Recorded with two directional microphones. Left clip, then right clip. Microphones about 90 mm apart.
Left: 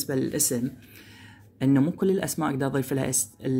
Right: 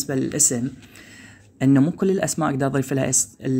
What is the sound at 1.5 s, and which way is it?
Speech, 35° right (ahead or behind).